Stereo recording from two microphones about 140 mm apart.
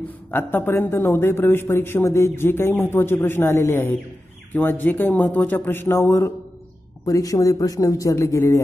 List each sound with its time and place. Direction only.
0.3 s a man's voice: 15° left (ahead or behind)